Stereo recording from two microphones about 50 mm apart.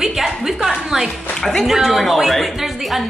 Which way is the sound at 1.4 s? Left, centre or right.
Centre.